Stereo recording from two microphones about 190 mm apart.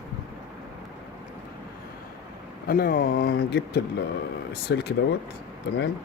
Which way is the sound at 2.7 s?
50° left (ahead or behind).